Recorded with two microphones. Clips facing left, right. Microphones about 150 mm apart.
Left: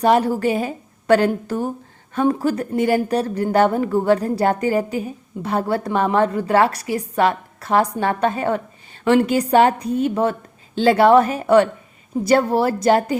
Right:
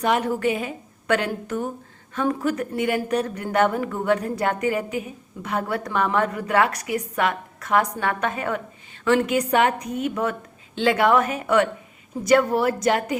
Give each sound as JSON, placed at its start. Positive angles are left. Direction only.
{"t": 0.0, "sound": "speech", "side_deg": 35}